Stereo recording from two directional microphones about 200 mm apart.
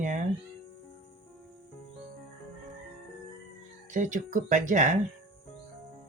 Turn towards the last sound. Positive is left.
turn(degrees=-40)  # may be behind; listen again after turning